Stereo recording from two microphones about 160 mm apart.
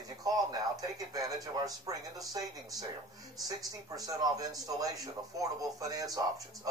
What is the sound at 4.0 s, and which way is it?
Speech, 20° right (ahead or behind).